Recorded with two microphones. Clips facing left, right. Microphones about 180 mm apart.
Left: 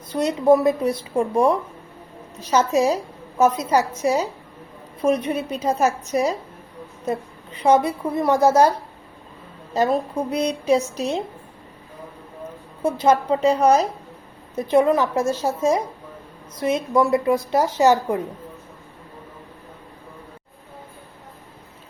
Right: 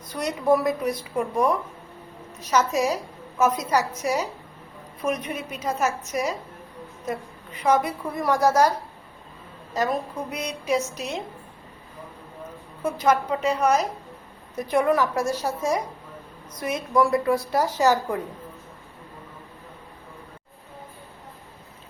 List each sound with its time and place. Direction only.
0.1 s a woman's voice: 25° left (ahead or behind)
9.7 s a woman's voice: 30° left (ahead or behind)
12.8 s a woman's voice: 30° left (ahead or behind)